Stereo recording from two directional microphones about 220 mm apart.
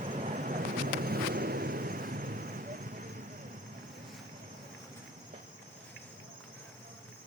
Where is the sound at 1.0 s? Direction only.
45° right (ahead or behind).